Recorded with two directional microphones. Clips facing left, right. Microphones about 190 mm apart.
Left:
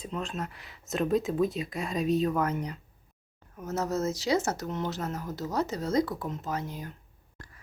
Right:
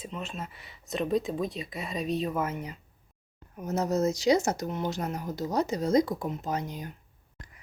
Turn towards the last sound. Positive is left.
turn(degrees=-20)  # may be behind; listen again after turning